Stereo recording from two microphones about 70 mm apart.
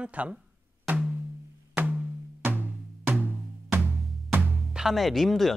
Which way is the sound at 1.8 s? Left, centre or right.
Right.